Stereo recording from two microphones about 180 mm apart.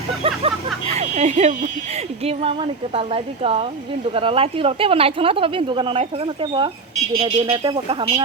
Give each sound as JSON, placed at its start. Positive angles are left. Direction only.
{"t": 0.2, "sound": "a woman's voice", "side_deg": -35}